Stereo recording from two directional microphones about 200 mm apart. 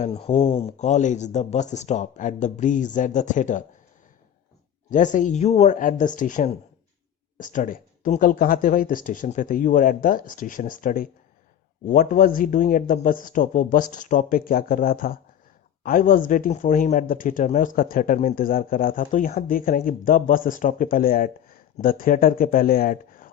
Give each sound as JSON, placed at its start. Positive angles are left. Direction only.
{"t": 0.0, "sound": "speech", "side_deg": 30}
{"t": 4.9, "sound": "speech", "side_deg": 40}